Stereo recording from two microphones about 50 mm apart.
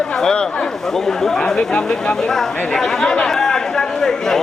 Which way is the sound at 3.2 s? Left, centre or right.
Centre.